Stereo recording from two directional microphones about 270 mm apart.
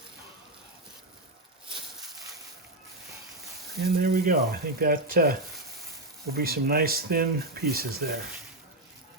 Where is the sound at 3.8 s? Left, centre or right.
Right.